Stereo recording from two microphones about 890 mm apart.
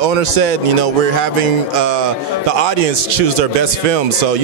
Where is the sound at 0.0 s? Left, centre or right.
Right.